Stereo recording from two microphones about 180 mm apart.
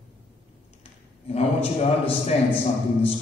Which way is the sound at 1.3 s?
35° left (ahead or behind).